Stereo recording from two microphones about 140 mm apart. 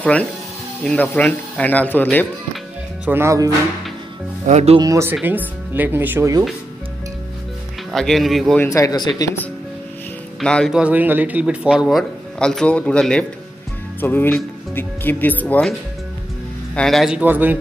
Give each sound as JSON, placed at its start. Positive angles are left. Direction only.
{"t": 0.0, "sound": "speech", "side_deg": 10}
{"t": 3.1, "sound": "speech", "side_deg": -20}
{"t": 4.5, "sound": "speech", "side_deg": -55}
{"t": 4.7, "sound": "speech", "side_deg": -25}
{"t": 5.2, "sound": "speech", "side_deg": -10}
{"t": 7.9, "sound": "speech", "side_deg": 0}
{"t": 8.6, "sound": "speech", "side_deg": 25}
{"t": 10.4, "sound": "speech", "side_deg": 5}
{"t": 10.7, "sound": "speech", "side_deg": -10}
{"t": 16.7, "sound": "speech", "side_deg": 0}